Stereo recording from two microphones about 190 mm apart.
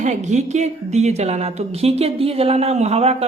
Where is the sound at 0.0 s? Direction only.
40° right (ahead or behind).